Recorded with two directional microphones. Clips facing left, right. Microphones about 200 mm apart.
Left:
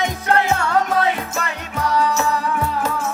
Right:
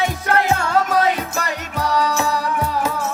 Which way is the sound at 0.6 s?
35° right (ahead or behind).